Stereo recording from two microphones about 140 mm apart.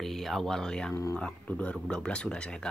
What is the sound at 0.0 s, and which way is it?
Speech, centre (ahead or behind).